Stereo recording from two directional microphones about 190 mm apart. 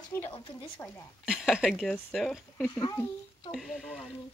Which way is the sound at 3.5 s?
Centre (ahead or behind).